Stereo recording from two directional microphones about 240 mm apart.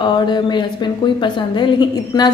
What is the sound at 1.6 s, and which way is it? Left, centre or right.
Speech, centre.